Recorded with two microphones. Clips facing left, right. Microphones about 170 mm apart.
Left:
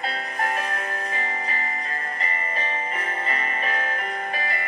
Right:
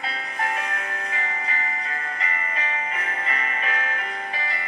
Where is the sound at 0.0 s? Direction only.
40° left (ahead or behind).